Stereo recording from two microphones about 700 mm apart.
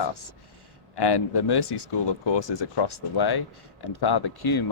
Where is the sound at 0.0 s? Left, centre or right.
Left.